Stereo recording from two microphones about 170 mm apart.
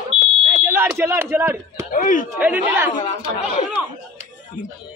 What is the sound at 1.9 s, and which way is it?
Speech, 50° left (ahead or behind).